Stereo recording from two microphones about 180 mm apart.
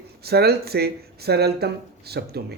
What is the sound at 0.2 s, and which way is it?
Speech, 60° right (ahead or behind).